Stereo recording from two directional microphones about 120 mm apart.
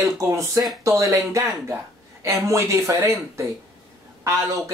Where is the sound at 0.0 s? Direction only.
25° right (ahead or behind).